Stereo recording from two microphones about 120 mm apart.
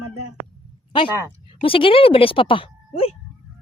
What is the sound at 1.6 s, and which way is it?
Speech, 45° left (ahead or behind).